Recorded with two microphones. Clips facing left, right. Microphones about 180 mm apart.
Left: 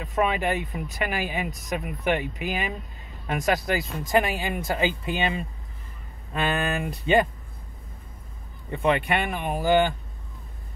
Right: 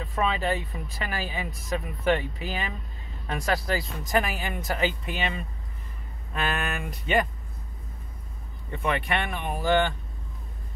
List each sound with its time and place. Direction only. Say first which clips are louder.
0.0 s speech: left 3 dB; 15° left (ahead or behind)
8.7 s speech: left 4 dB; 25° left (ahead or behind)
9.2 s speech: left 3 dB; 10° left (ahead or behind)